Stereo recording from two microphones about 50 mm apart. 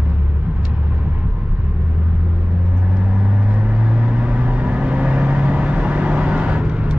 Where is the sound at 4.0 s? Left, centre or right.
Right.